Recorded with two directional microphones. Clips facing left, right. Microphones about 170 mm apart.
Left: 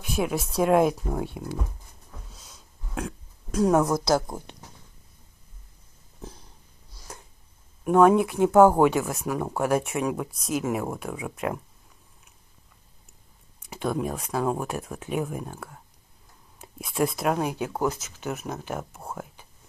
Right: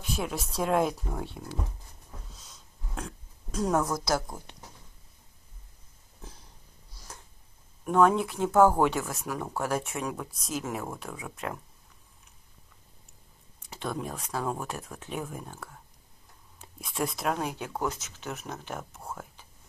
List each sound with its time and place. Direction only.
0.2 s speech: 10° left (ahead or behind)
3.5 s a woman's voice: 10° left (ahead or behind)
3.8 s speech: 20° left (ahead or behind)
7.8 s speech: 10° left (ahead or behind)
13.7 s speech: 10° left (ahead or behind)
18.8 s speech: 30° left (ahead or behind)